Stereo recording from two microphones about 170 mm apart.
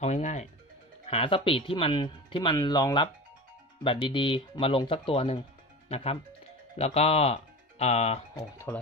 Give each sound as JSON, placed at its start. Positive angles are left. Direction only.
{"t": 0.0, "sound": "speech", "side_deg": 40}
{"t": 8.4, "sound": "speech", "side_deg": 15}